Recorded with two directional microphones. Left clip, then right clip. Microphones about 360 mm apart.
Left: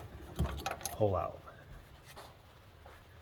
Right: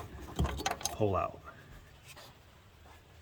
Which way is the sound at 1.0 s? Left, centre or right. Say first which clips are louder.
Even; centre.